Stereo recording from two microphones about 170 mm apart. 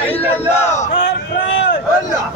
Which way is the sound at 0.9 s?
90° left.